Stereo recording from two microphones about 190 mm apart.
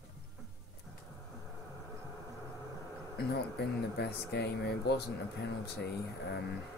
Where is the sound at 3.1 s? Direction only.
60° left (ahead or behind).